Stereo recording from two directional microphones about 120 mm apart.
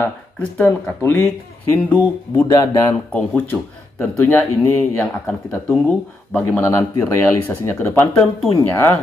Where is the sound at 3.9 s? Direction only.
20° left (ahead or behind).